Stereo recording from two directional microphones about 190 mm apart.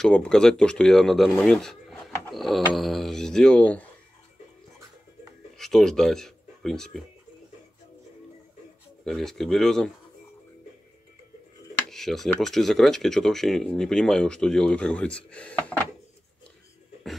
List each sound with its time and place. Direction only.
0.0 s speech: 5° left (ahead or behind)
5.6 s speech: centre (ahead or behind)
9.0 s speech: centre (ahead or behind)
11.9 s speech: centre (ahead or behind)